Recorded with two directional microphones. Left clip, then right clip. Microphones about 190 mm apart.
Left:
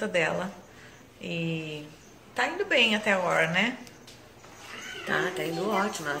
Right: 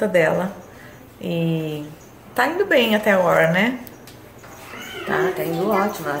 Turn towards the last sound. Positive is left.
turn(degrees=15)  # may be behind; listen again after turning